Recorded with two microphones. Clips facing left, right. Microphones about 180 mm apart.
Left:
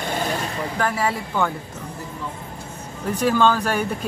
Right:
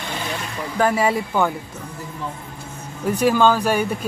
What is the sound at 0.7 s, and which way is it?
Speech, 20° right (ahead or behind).